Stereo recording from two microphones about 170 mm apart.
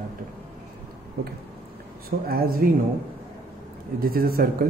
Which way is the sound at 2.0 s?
65° right (ahead or behind).